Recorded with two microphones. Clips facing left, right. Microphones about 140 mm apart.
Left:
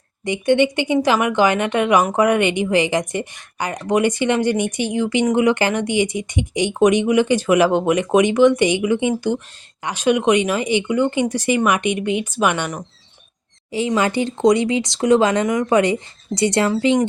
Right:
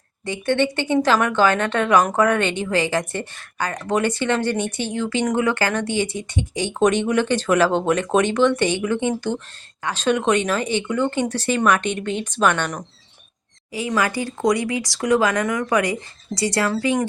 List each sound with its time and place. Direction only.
0.3 s speech: 15° left (ahead or behind)
13.7 s speech: 25° left (ahead or behind)